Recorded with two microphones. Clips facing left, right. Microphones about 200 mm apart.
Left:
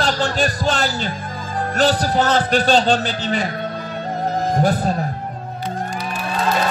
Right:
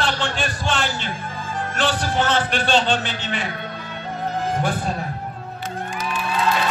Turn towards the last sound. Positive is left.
turn(degrees=40)  # may be behind; listen again after turning